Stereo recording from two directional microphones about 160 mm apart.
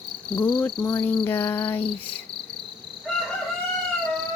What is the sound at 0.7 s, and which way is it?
Cricket, 30° left (ahead or behind).